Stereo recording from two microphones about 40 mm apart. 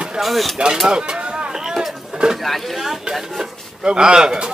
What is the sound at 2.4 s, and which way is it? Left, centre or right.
Speech, centre.